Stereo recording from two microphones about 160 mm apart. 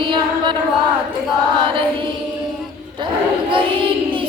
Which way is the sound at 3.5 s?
30° right (ahead or behind).